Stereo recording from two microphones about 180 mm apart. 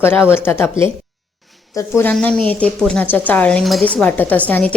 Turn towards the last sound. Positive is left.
turn(degrees=5)  # may be behind; listen again after turning